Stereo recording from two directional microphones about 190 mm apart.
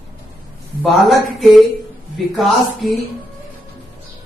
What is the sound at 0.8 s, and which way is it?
Speech, centre (ahead or behind).